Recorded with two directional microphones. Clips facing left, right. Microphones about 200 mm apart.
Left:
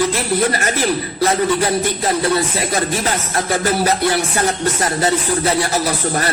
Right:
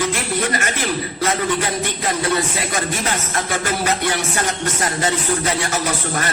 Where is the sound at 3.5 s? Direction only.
35° left (ahead or behind).